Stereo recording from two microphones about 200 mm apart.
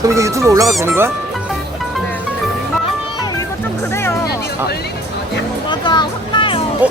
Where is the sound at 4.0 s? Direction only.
10° left (ahead or behind).